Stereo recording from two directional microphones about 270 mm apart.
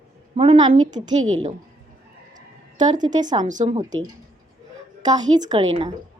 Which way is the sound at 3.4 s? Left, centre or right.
Right.